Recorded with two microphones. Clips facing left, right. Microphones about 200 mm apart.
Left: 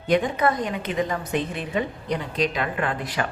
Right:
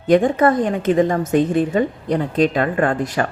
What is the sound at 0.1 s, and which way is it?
A woman's voice, 50° right (ahead or behind).